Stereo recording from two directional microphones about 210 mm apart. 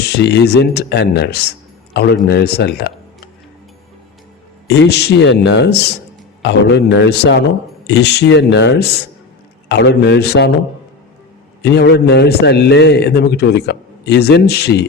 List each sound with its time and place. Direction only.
0.0 s a man's voice: 50° left (ahead or behind)
4.7 s a man's voice: 55° left (ahead or behind)
11.6 s a man's voice: 50° left (ahead or behind)